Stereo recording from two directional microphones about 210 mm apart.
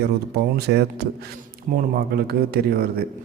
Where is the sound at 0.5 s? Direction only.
50° right (ahead or behind).